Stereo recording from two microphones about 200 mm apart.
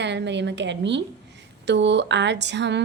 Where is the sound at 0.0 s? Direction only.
60° right (ahead or behind).